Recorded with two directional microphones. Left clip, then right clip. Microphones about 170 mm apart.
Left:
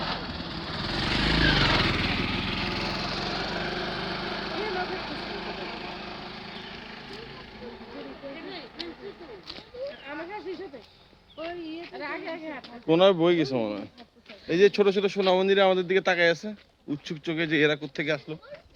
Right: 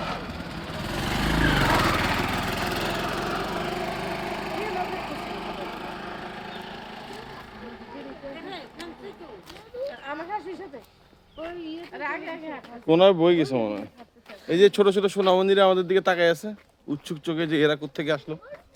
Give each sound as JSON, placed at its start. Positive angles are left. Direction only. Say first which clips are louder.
{"t": 0.0, "sound": "vehicle", "louder": "even", "side_deg": -40}
{"t": 11.9, "sound": "a sound", "louder": "right 3 dB", "side_deg": -35}
{"t": 12.9, "sound": "speech", "louder": "right 3 dB", "side_deg": -15}